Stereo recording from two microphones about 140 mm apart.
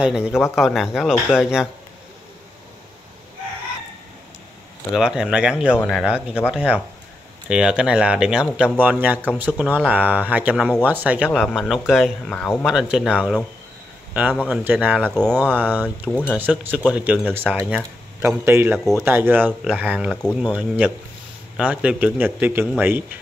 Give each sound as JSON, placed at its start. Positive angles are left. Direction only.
{"t": 0.0, "sound": "speech", "side_deg": -5}
{"t": 4.9, "sound": "speech", "side_deg": -5}
{"t": 11.3, "sound": "speech", "side_deg": 0}
{"t": 12.3, "sound": "speech", "side_deg": 10}
{"t": 12.6, "sound": "speech", "side_deg": -5}
{"t": 14.4, "sound": "speech", "side_deg": -10}
{"t": 15.0, "sound": "speech", "side_deg": 5}
{"t": 15.5, "sound": "speech", "side_deg": -15}
{"t": 16.1, "sound": "speech", "side_deg": 15}
{"t": 16.3, "sound": "speech", "side_deg": -15}